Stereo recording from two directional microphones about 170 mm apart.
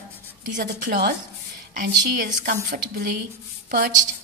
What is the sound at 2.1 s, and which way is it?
A woman's voice, 55° right (ahead or behind).